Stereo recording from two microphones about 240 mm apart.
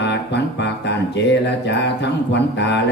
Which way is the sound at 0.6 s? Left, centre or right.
Left.